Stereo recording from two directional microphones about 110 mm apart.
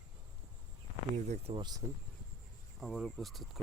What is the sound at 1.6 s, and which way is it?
Speech, 40° right (ahead or behind).